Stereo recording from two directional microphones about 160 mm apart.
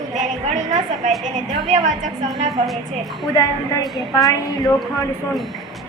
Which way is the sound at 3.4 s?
20° left (ahead or behind).